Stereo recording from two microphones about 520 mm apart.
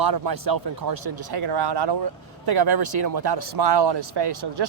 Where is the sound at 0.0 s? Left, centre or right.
Right.